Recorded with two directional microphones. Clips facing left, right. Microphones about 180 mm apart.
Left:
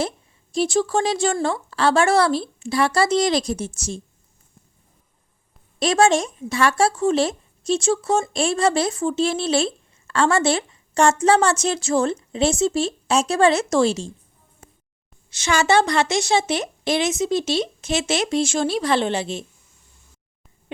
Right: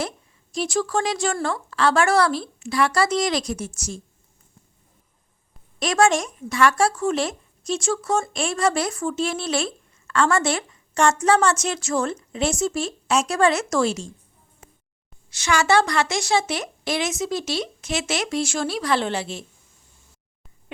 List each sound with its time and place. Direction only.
0.5 s speech: 30° left (ahead or behind)
5.8 s speech: 25° left (ahead or behind)
15.3 s speech: 25° left (ahead or behind)